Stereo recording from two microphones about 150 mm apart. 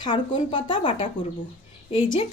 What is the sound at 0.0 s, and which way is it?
Speech, 30° left (ahead or behind).